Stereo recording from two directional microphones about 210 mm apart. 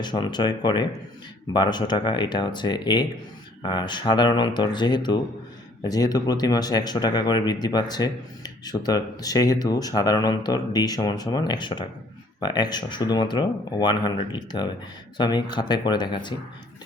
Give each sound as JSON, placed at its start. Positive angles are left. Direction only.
{"t": 0.0, "sound": "speech", "side_deg": 20}